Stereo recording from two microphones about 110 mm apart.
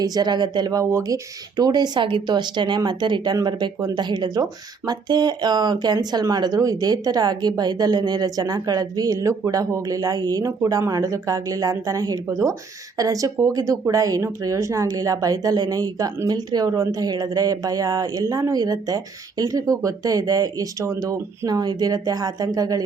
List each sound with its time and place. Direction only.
0.0 s speech: 35° right (ahead or behind)